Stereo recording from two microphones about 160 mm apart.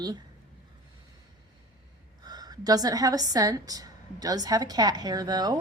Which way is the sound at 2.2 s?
25° right (ahead or behind).